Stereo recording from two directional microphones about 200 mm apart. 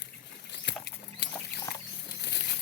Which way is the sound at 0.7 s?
60° left (ahead or behind).